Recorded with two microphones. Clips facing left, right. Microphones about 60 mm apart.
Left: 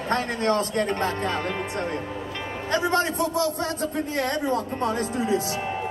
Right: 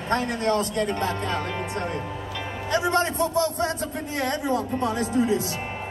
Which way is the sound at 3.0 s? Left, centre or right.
Right.